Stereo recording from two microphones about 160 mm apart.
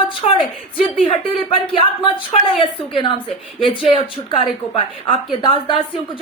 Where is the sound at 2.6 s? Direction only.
30° left (ahead or behind).